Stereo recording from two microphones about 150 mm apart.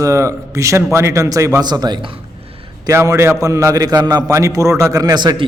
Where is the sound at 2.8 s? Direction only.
20° right (ahead or behind).